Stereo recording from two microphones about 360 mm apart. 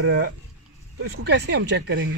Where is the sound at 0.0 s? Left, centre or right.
Right.